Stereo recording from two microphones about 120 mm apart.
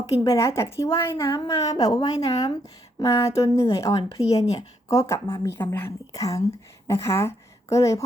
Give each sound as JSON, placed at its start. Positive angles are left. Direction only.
{"t": 0.0, "sound": "a woman's voice", "side_deg": 25}
{"t": 1.3, "sound": "a woman's voice", "side_deg": 40}
{"t": 2.1, "sound": "speech", "side_deg": 60}
{"t": 3.0, "sound": "a woman's voice", "side_deg": 25}